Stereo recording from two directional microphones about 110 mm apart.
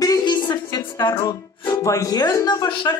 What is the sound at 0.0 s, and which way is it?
Speech, 35° left (ahead or behind).